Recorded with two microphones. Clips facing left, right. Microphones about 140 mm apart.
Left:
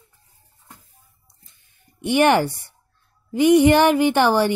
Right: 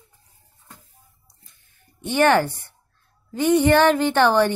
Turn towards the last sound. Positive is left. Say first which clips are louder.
# even
turn(degrees=10)  # may be behind; listen again after turning